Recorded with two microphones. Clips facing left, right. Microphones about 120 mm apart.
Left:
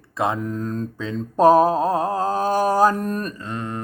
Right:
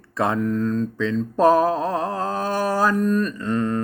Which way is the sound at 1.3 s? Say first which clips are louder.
Left 3 dB; 40° left (ahead or behind).